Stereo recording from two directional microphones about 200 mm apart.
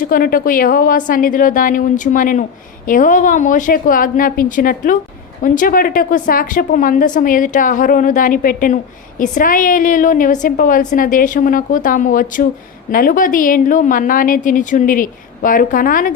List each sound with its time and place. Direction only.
0.0 s a woman's voice: 45° left (ahead or behind)